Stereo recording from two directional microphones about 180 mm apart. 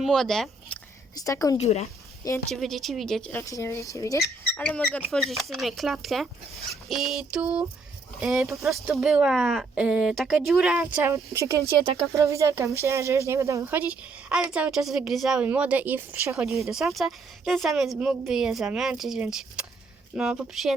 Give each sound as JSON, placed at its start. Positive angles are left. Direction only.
{"t": 0.0, "sound": "speech", "side_deg": 0}
{"t": 1.1, "sound": "a woman's voice", "side_deg": 20}
{"t": 1.5, "sound": "speech", "side_deg": 35}
{"t": 2.5, "sound": "a woman's voice", "side_deg": 0}
{"t": 3.4, "sound": "speech", "side_deg": 15}
{"t": 4.6, "sound": "a woman's voice", "side_deg": 5}